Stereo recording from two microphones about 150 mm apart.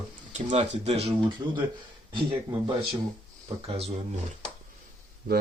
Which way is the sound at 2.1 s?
35° right (ahead or behind).